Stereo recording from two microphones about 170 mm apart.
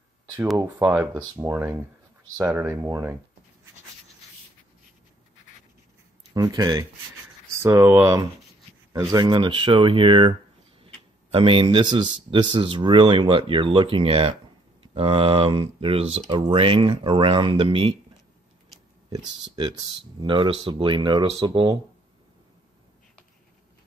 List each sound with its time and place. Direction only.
0.6 s speech: 15° right (ahead or behind)
6.3 s speech: 25° right (ahead or behind)
11.3 s speech: 35° right (ahead or behind)
19.1 s speech: 25° right (ahead or behind)